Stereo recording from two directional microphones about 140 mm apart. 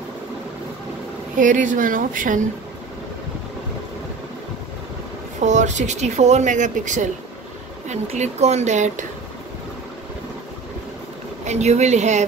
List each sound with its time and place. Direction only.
1.4 s speech: 65° right (ahead or behind)
5.4 s speech: 60° right (ahead or behind)
11.4 s speech: 55° right (ahead or behind)